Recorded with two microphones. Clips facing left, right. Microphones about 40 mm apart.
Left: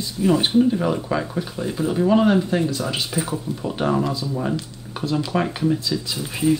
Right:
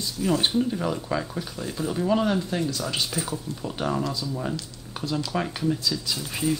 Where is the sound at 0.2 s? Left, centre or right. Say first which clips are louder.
Left 6 dB; centre.